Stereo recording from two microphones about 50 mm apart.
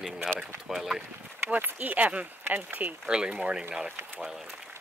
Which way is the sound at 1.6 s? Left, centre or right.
Right.